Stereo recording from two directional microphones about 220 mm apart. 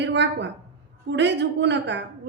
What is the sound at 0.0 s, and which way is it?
A woman's voice, 55° right (ahead or behind).